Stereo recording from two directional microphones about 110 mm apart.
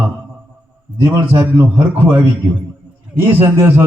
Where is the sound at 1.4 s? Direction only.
15° right (ahead or behind).